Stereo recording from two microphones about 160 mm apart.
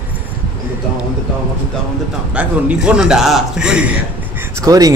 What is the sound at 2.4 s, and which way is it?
A man's voice, 5° right (ahead or behind).